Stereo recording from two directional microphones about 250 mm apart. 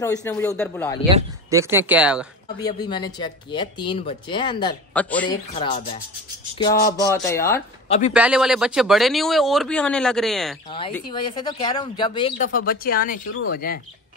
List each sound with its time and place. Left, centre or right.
0.0 s speech: centre
1.0 s speech: centre
2.6 s speech: centre
4.9 s speech: centre
5.5 s speech: centre
6.9 s speech: centre
8.1 s speech: centre
11.1 s speech: centre
12.5 s speech: left